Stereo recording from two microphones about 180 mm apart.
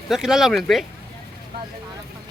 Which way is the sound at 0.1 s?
Centre (ahead or behind).